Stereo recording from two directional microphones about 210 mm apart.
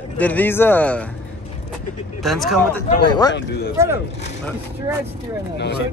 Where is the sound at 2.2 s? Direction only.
Centre (ahead or behind).